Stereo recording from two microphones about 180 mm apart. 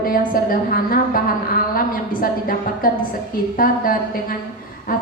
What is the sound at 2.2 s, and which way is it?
A woman's voice, 50° left (ahead or behind).